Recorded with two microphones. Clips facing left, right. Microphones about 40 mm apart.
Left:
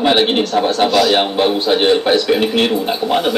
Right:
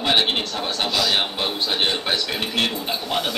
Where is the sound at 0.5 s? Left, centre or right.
Left.